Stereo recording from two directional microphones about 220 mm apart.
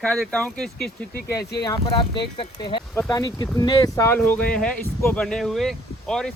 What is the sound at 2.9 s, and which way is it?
Speech, 10° left (ahead or behind).